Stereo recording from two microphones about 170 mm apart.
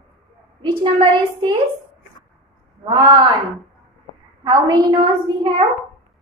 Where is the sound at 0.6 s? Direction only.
30° right (ahead or behind).